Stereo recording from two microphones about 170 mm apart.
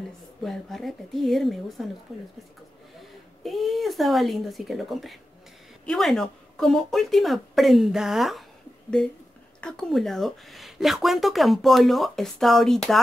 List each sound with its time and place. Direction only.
0.4 s speech: centre (ahead or behind)
3.0 s speech: centre (ahead or behind)